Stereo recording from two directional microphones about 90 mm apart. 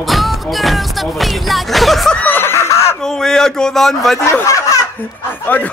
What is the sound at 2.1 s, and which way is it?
Screaming, 20° left (ahead or behind).